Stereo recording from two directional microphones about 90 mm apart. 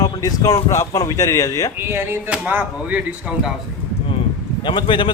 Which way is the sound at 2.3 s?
15° right (ahead or behind).